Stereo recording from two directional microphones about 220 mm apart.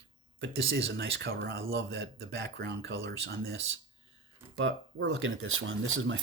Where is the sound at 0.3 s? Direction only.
55° right (ahead or behind).